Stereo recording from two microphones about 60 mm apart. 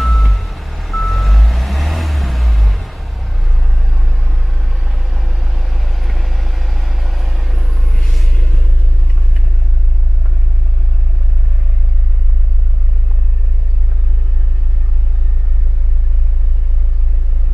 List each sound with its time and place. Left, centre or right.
0.0 s reversing beeps: centre